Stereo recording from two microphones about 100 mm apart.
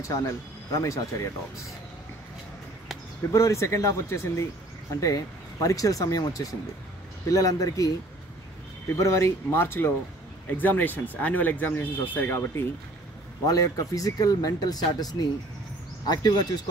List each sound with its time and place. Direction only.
0.0 s speech: 30° left (ahead or behind)
3.3 s speech: 30° left (ahead or behind)
8.9 s speech: 30° left (ahead or behind)
13.5 s speech: 35° left (ahead or behind)